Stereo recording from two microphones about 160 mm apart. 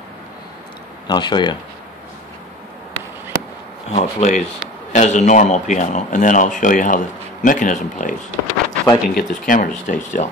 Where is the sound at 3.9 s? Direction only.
45° left (ahead or behind).